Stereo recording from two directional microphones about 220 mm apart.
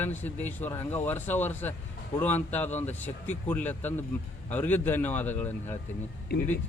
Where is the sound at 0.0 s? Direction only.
10° left (ahead or behind).